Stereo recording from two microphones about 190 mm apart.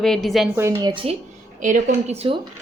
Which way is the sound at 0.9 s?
25° right (ahead or behind).